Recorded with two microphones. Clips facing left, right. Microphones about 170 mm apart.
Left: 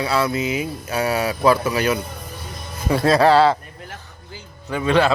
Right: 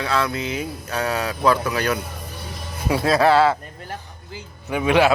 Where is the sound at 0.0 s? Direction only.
5° left (ahead or behind).